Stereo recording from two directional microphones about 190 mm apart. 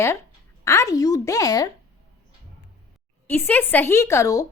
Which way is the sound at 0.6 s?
15° left (ahead or behind).